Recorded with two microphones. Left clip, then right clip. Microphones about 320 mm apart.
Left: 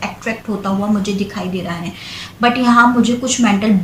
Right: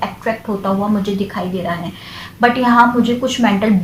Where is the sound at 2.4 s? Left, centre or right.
Right.